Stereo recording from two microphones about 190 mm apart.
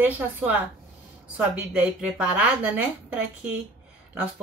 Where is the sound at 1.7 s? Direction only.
5° right (ahead or behind).